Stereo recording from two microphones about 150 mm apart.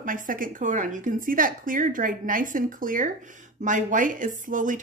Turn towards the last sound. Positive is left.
turn(degrees=-60)  # may be behind; listen again after turning